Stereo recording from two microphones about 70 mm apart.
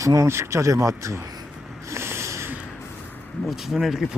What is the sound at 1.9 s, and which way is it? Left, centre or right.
Snort, right.